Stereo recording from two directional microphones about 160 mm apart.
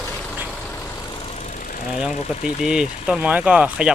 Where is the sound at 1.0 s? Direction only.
30° left (ahead or behind).